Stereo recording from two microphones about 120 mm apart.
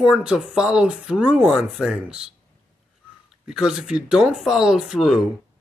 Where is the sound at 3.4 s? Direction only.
5° right (ahead or behind).